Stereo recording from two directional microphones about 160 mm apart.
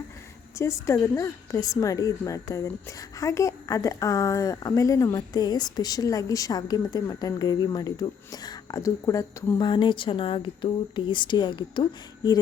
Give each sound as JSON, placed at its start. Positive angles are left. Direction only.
{"t": 0.6, "sound": "speech", "side_deg": 20}